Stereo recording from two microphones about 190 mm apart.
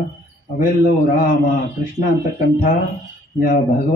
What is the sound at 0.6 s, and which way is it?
Speech, 45° left (ahead or behind).